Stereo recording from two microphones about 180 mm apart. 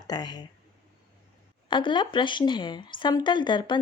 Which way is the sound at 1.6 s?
25° left (ahead or behind).